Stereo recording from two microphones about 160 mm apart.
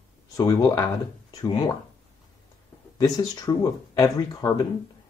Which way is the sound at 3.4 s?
20° left (ahead or behind).